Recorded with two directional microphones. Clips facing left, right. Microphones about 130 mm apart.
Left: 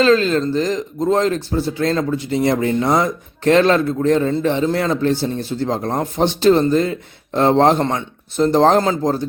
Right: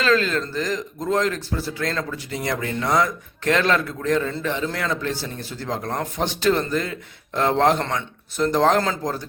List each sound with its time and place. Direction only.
0.0 s speech: 25° left (ahead or behind)